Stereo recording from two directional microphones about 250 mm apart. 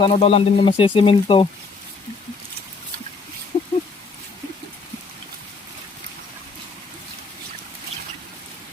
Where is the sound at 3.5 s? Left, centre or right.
Centre.